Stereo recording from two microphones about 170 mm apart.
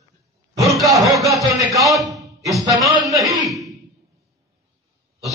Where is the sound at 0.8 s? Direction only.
Centre (ahead or behind).